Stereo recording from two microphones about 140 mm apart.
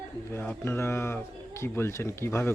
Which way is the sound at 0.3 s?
15° left (ahead or behind).